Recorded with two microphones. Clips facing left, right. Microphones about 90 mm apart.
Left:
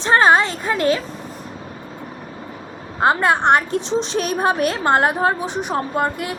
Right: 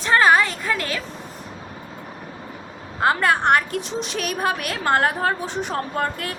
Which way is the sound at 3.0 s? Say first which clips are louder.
Left 3 dB; 25° left (ahead or behind).